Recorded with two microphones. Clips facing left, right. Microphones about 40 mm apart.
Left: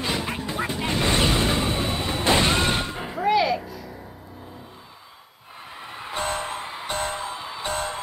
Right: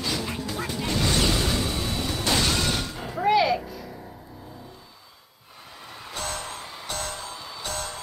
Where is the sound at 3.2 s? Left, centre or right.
Centre.